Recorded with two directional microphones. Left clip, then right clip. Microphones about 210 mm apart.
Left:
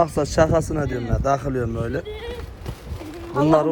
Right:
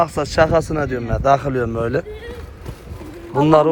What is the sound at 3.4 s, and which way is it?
Speech, 10° left (ahead or behind).